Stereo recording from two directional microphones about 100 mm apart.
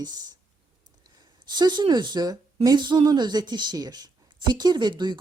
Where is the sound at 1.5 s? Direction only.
45° right (ahead or behind).